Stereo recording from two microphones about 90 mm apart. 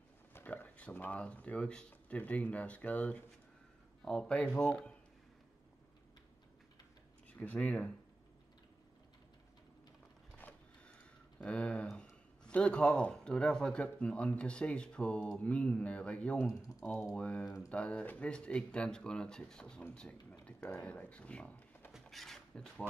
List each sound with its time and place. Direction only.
0.3 s speech: 20° left (ahead or behind)
7.2 s speech: 15° left (ahead or behind)
10.3 s a sound: 15° left (ahead or behind)
12.4 s speech: 10° left (ahead or behind)
22.0 s speech: 5° left (ahead or behind)